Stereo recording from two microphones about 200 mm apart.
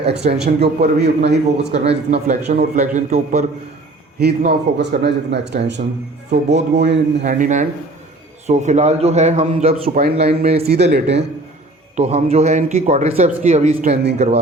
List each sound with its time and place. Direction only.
0.3 s speech: 55° right (ahead or behind)
1.7 s a man's voice: 30° right (ahead or behind)
4.2 s speech: 55° right (ahead or behind)
7.3 s a man's voice: 40° right (ahead or behind)
10.0 s speech: 50° right (ahead or behind)
11.9 s a man's voice: 35° right (ahead or behind)
13.9 s speech: 55° right (ahead or behind)